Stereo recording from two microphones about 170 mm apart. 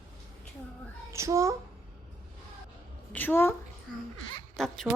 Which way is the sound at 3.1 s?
10° left (ahead or behind).